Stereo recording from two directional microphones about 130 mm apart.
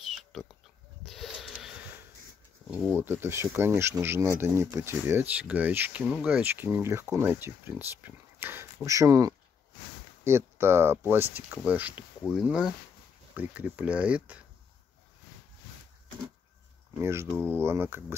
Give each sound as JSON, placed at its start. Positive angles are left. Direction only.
{"t": 0.1, "sound": "pig", "side_deg": 0}
{"t": 1.0, "sound": "a sound", "side_deg": 0}
{"t": 2.7, "sound": "speech", "side_deg": -15}
{"t": 17.0, "sound": "speech", "side_deg": -20}
{"t": 17.3, "sound": "speech", "side_deg": 10}
{"t": 17.6, "sound": "speech", "side_deg": -20}